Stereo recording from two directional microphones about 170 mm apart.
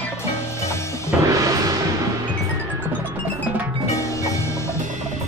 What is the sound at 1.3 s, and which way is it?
Music, 20° right (ahead or behind).